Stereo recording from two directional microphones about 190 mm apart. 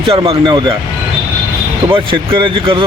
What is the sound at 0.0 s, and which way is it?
Speech, 30° right (ahead or behind).